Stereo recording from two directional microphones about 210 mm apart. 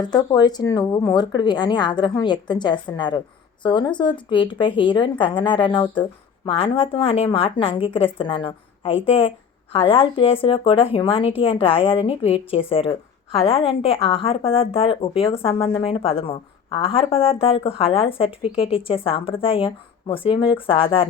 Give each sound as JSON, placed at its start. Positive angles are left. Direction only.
{"t": 0.0, "sound": "a woman's voice", "side_deg": 20}